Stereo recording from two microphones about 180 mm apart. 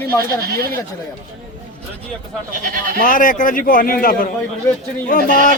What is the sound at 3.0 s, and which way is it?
Speech, 50° left (ahead or behind).